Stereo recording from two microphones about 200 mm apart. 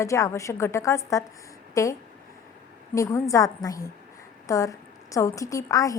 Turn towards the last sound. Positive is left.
turn(degrees=15)  # may be behind; listen again after turning